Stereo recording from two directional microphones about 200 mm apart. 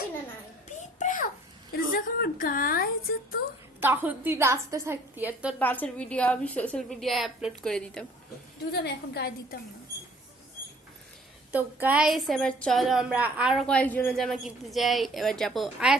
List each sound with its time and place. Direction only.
0.8 s a sound: 40° left (ahead or behind)
1.7 s a woman's voice: 45° left (ahead or behind)
3.8 s a woman's voice: 10° right (ahead or behind)
5.5 s a woman's voice: 10° left (ahead or behind)
8.7 s a woman's voice: 55° left (ahead or behind)
11.5 s a woman's voice: 10° right (ahead or behind)